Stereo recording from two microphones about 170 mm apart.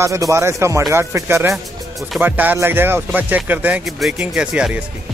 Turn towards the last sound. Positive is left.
turn(degrees=-5)  # may be behind; listen again after turning